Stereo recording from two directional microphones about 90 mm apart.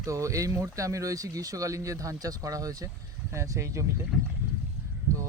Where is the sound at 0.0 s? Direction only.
35° right (ahead or behind).